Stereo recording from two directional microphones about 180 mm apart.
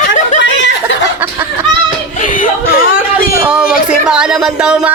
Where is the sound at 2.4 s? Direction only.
50° left (ahead or behind).